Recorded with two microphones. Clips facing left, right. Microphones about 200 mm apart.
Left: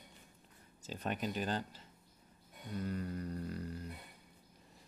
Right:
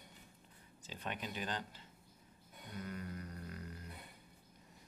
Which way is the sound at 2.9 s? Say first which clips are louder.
Left 6 dB; 35° left (ahead or behind).